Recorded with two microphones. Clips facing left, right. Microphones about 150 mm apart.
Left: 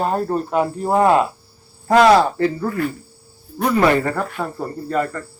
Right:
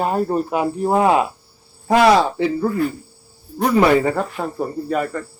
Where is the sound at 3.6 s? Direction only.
15° right (ahead or behind).